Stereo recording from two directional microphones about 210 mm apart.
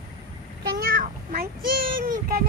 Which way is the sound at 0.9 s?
45° right (ahead or behind).